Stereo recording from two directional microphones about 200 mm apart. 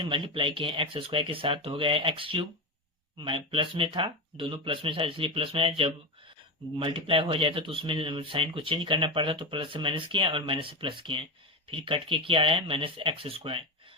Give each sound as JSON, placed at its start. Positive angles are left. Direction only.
{"t": 0.0, "sound": "speech", "side_deg": -25}